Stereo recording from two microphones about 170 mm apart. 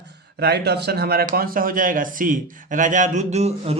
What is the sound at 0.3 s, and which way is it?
Speech, 70° right (ahead or behind).